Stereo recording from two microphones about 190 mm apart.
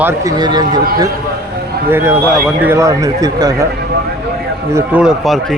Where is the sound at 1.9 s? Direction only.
10° right (ahead or behind).